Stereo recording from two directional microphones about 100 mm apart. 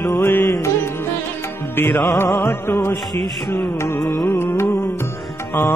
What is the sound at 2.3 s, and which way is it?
Music, 5° left (ahead or behind).